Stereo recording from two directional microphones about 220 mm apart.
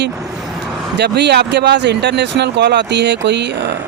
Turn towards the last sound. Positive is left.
turn(degrees=-50)  # may be behind; listen again after turning